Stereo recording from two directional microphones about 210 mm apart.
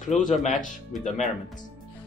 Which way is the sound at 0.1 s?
35° left (ahead or behind).